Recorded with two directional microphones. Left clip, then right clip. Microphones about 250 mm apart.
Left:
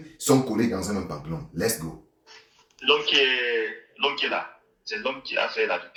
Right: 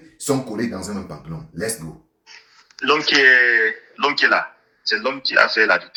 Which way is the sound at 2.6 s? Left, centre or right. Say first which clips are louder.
Right 4 dB; right.